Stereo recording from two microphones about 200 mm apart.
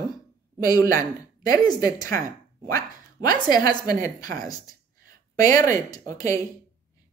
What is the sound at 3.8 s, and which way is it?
Speech, 40° right (ahead or behind).